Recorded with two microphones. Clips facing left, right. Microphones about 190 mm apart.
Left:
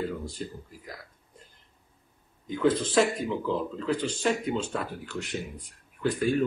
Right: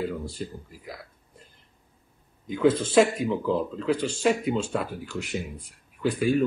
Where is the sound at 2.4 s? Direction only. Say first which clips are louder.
Right 3 dB; 5° right (ahead or behind).